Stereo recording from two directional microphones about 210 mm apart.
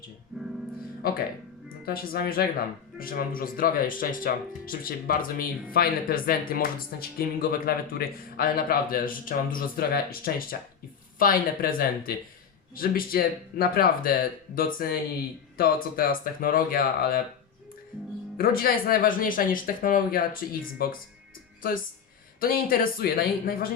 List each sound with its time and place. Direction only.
0.3 s music: centre (ahead or behind)
1.8 s speech: 45° left (ahead or behind)
18.3 s speech: 45° left (ahead or behind)
22.4 s speech: 45° left (ahead or behind)